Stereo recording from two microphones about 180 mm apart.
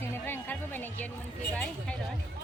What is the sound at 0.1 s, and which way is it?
Music, 10° left (ahead or behind).